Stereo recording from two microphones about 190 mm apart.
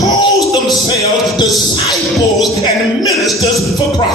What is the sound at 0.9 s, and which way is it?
Music, 20° left (ahead or behind).